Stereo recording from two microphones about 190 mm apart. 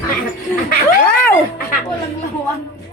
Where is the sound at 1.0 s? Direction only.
10° left (ahead or behind).